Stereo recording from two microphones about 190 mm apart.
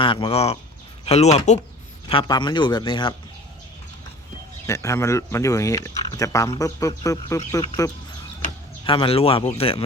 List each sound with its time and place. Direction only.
0.0 s speech: 25° left (ahead or behind)
2.0 s speech: 25° left (ahead or behind)
4.6 s speech: 15° left (ahead or behind)
8.8 s speech: 25° left (ahead or behind)